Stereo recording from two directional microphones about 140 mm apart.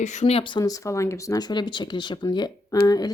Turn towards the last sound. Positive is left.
turn(degrees=25)  # may be behind; listen again after turning